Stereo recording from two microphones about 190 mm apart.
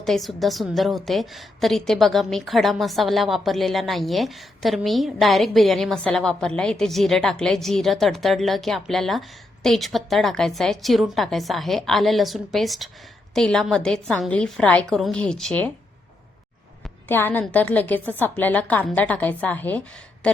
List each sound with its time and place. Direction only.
0.0 s a woman's voice: centre (ahead or behind)
17.1 s a woman's voice: 10° left (ahead or behind)
20.2 s a sound: 5° left (ahead or behind)